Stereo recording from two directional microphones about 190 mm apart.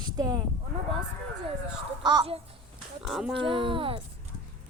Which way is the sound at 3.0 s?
Centre (ahead or behind).